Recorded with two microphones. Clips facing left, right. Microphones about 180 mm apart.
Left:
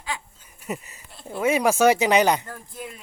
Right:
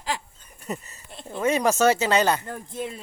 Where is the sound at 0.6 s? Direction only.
10° left (ahead or behind).